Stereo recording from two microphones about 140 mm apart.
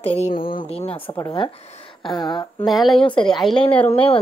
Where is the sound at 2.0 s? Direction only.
35° left (ahead or behind).